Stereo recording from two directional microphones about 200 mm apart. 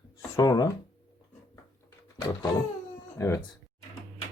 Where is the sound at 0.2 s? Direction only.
15° left (ahead or behind).